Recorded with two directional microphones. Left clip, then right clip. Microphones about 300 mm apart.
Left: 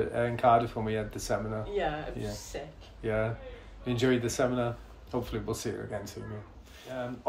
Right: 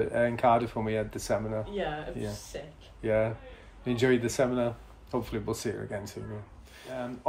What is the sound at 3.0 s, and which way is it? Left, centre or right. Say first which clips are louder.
Speech: right 4 dB; right.